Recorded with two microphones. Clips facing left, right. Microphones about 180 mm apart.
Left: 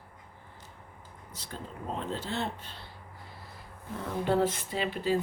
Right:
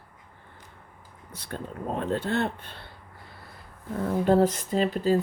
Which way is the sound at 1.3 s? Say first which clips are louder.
Right 6 dB; 60° right (ahead or behind).